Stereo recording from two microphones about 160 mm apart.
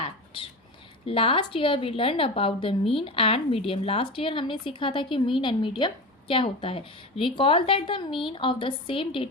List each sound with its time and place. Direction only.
1.0 s a woman's voice: 35° left (ahead or behind)